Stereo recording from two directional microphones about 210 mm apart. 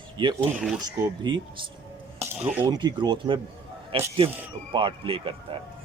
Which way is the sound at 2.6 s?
20° right (ahead or behind).